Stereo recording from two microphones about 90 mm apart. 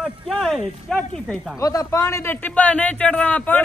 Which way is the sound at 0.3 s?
Centre (ahead or behind).